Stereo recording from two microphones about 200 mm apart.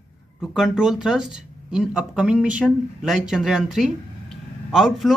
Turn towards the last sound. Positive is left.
turn(degrees=0)  # may be behind; listen again after turning